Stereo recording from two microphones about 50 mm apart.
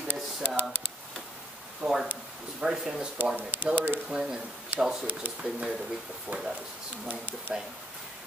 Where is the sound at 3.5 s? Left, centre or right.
Right.